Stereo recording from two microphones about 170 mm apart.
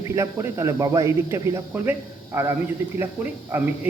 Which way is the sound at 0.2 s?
15° right (ahead or behind).